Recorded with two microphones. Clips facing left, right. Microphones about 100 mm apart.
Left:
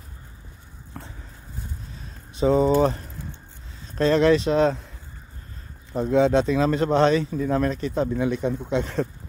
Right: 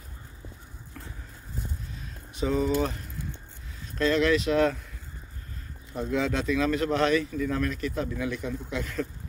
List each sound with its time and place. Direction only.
1.0 s vehicle: 35° left (ahead or behind)
2.3 s speech: 30° left (ahead or behind)
4.0 s speech: 30° left (ahead or behind)
5.9 s speech: 25° left (ahead or behind)